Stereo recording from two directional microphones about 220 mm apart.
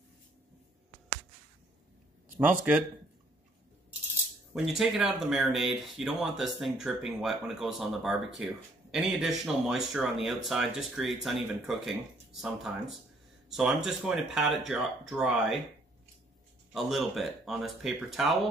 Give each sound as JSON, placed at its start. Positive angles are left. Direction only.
{"t": 4.6, "sound": "speech", "side_deg": 0}
{"t": 16.7, "sound": "speech", "side_deg": 0}